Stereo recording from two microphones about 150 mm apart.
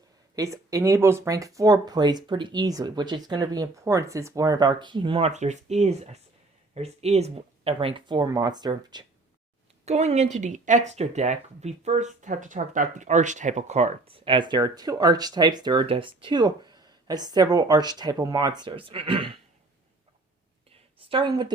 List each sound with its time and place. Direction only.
0.3 s speech: 20° right (ahead or behind)
9.8 s speech: 45° right (ahead or behind)
21.0 s a woman's voice: 35° right (ahead or behind)